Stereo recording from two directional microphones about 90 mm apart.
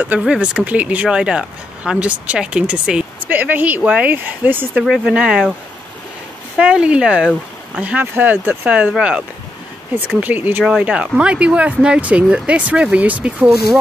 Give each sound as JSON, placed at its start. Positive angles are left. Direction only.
{"t": 0.2, "sound": "speech", "side_deg": -10}
{"t": 4.7, "sound": "speech", "side_deg": -10}
{"t": 6.5, "sound": "speech", "side_deg": -10}
{"t": 10.2, "sound": "speech", "side_deg": -20}